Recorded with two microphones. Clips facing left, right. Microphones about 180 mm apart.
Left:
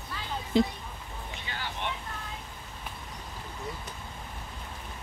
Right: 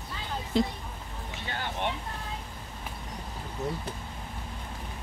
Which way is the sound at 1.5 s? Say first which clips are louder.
Right 4 dB; 50° right (ahead or behind).